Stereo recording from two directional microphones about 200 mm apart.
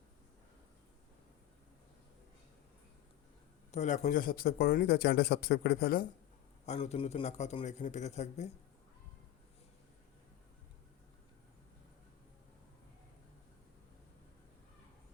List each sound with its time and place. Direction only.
3.7 s speech: 35° left (ahead or behind)
6.7 s a man's voice: 30° left (ahead or behind)